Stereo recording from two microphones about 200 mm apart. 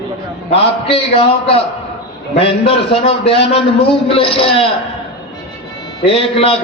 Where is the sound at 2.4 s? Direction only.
30° left (ahead or behind).